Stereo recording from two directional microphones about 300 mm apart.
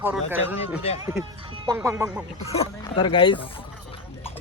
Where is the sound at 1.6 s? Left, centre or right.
Centre.